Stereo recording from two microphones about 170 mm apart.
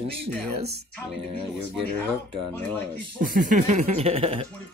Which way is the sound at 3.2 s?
55° right (ahead or behind).